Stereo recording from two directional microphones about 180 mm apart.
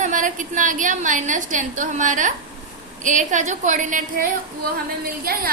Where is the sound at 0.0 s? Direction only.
45° right (ahead or behind).